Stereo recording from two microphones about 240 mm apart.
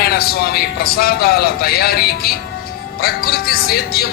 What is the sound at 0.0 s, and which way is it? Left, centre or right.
Speech, left.